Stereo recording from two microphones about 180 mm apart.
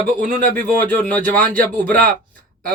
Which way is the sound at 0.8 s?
10° left (ahead or behind).